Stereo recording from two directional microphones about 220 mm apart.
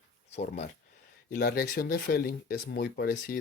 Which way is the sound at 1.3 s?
45° left (ahead or behind).